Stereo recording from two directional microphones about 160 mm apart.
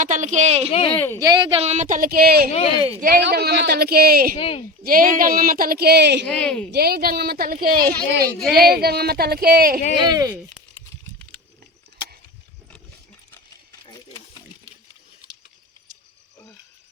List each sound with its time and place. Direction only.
0.0 s speech: 50° right (ahead or behind)
0.7 s speech: 35° left (ahead or behind)
0.9 s speech: 15° left (ahead or behind)
1.2 s speech: 25° right (ahead or behind); by 2.5 s 75° right (ahead or behind)
2.5 s speech: 40° left (ahead or behind)
3.0 s speech: 75° right (ahead or behind)
4.4 s speech: 35° left (ahead or behind)
4.8 s speech: 60° right (ahead or behind); by 6.2 s 90° right
6.2 s speech: 10° left (ahead or behind)
6.7 s speech: 75° right (ahead or behind)